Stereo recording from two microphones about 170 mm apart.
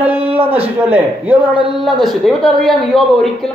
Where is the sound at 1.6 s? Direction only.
25° right (ahead or behind).